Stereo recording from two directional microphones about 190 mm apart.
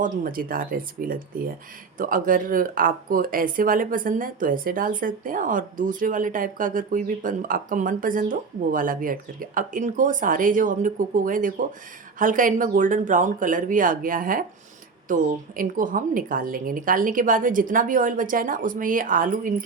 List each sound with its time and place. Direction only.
0.0 s speech: 45° right (ahead or behind)